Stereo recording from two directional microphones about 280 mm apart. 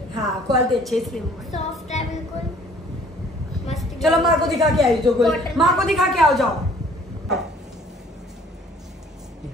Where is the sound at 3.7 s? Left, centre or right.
Centre.